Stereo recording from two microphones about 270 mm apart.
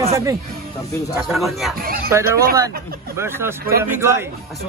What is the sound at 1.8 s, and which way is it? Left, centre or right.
Speech, right.